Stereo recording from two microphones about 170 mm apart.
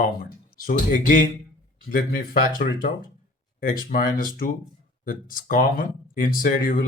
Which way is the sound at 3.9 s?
55° left (ahead or behind).